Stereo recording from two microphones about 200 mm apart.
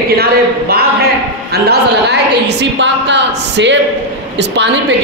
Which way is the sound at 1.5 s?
55° right (ahead or behind).